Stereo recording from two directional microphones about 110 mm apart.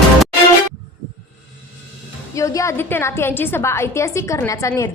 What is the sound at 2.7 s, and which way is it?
A woman's voice, 20° left (ahead or behind).